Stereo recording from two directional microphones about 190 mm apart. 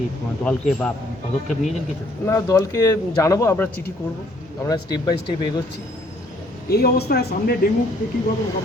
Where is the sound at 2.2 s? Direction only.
15° left (ahead or behind).